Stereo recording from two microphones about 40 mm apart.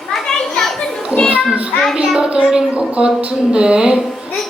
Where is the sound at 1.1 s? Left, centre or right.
Right.